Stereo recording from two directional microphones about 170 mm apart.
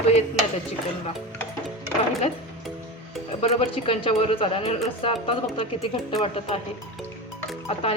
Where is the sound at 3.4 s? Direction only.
35° left (ahead or behind).